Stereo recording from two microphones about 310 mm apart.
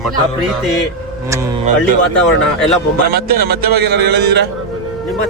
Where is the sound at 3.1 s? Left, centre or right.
Right.